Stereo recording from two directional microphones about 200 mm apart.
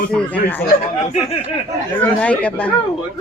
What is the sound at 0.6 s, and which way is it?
Speech, 35° left (ahead or behind).